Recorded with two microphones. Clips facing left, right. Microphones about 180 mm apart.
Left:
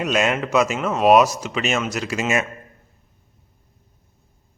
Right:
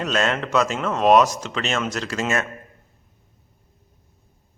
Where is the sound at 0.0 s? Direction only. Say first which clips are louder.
Left 2 dB; 10° left (ahead or behind).